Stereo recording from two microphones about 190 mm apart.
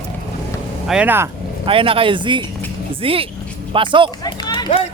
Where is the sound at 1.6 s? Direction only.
25° right (ahead or behind).